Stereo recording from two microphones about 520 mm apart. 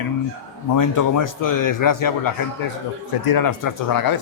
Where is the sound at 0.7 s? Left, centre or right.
Left.